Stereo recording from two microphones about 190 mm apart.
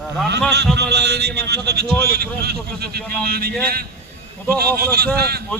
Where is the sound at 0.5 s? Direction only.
60° right (ahead or behind).